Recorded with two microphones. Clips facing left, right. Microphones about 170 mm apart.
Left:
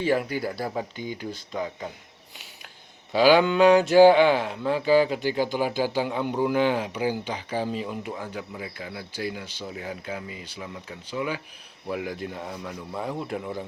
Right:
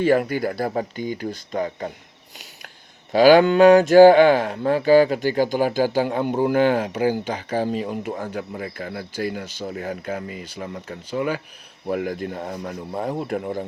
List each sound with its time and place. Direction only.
0.0 s speech: 55° right (ahead or behind)
3.1 s speech: 45° right (ahead or behind)